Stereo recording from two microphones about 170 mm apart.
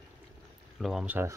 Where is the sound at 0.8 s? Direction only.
Centre (ahead or behind).